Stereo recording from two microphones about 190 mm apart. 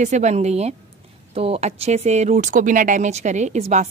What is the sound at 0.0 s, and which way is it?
Speech, 40° right (ahead or behind).